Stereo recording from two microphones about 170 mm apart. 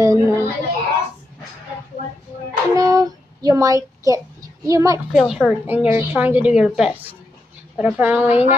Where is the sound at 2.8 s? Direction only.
20° right (ahead or behind).